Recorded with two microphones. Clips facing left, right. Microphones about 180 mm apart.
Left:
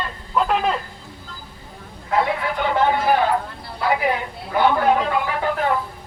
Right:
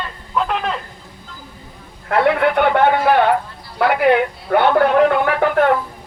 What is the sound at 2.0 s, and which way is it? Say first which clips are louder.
A man's voice: right 6 dB; 70° right (ahead or behind).